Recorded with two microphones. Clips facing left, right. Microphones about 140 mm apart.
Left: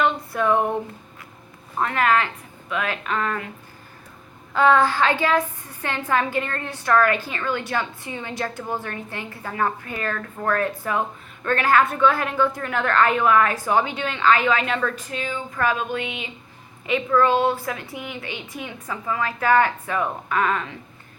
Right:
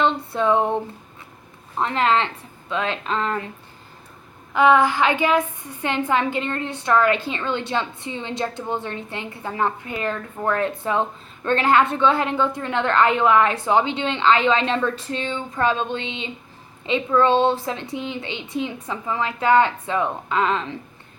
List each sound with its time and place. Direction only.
0.0 s a sound: 25° right (ahead or behind)
1.8 s a woman's voice: 25° right (ahead or behind)
4.5 s a woman's voice: 15° right (ahead or behind)